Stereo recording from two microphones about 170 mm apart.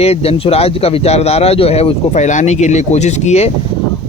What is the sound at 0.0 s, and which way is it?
Speech, 35° left (ahead or behind).